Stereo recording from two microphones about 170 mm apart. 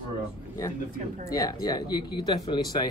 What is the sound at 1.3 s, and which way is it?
Speech, 20° left (ahead or behind).